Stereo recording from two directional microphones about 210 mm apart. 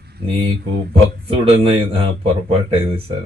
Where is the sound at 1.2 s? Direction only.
25° right (ahead or behind).